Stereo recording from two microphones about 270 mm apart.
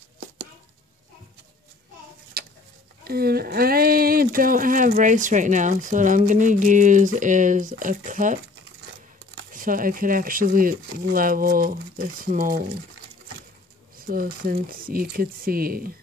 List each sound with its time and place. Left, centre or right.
2.4 s bird: right
3.0 s speech: right
13.9 s speech: right